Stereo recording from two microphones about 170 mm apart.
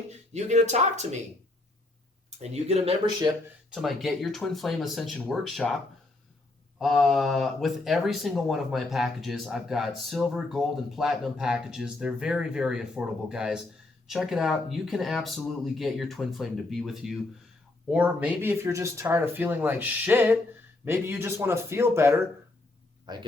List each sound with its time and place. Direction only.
0.1 s speech: 40° right (ahead or behind)
2.4 s speech: 40° right (ahead or behind)
3.2 s speech: 25° right (ahead or behind)
3.7 s speech: centre (ahead or behind)
6.7 s speech: centre (ahead or behind); by 23.2 s 25° right (ahead or behind)